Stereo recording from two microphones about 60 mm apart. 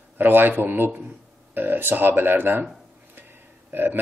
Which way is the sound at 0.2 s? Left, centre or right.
Right.